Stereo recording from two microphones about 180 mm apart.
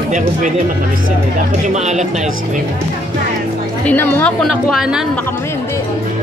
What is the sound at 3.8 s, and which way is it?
A woman's voice, 10° left (ahead or behind).